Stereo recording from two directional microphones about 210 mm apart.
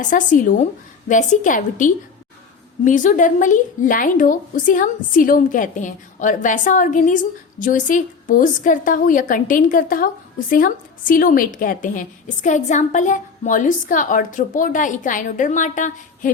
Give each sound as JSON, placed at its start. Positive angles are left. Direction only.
{"t": 0.0, "sound": "a woman's voice", "side_deg": 40}